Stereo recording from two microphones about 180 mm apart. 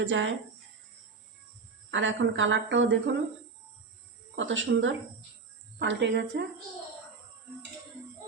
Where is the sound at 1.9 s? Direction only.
90° right.